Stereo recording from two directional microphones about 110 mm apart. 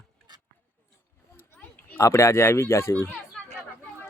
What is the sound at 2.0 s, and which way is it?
Speech, 25° left (ahead or behind).